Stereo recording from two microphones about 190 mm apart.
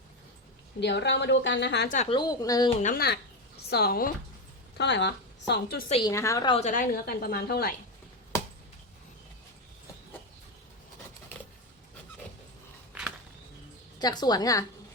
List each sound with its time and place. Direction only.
0.8 s a woman's voice: 65° left (ahead or behind)
1.9 s a woman's voice: 35° left (ahead or behind)
2.1 s a woman's voice: 20° left (ahead or behind)
2.8 s a woman's voice: 50° left (ahead or behind)
4.8 s speech: 65° left (ahead or behind)
5.9 s a woman's voice: 20° left (ahead or behind)
6.6 s a woman's voice: 40° left (ahead or behind)
12.9 s a sound: 10° right (ahead or behind)
14.0 s a woman's voice: 20° left (ahead or behind)